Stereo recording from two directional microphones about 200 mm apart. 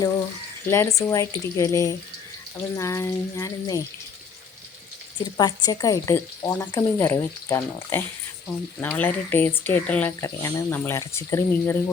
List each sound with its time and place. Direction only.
0.7 s speech: 15° left (ahead or behind)
5.1 s speech: 20° left (ahead or behind)